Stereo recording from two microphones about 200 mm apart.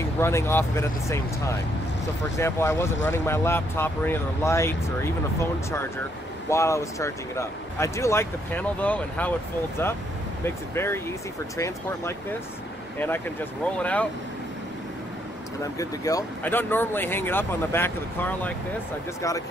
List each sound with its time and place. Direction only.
0.2 s speech: 15° left (ahead or behind)
10.4 s speech: 10° left (ahead or behind)
15.8 s speech: 15° left (ahead or behind)